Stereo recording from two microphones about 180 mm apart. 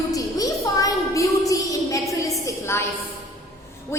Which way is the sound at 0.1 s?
20° left (ahead or behind).